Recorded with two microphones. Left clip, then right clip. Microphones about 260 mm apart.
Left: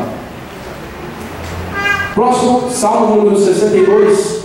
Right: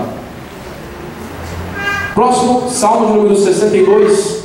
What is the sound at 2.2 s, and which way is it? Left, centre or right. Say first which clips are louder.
Speech: right 2 dB; left.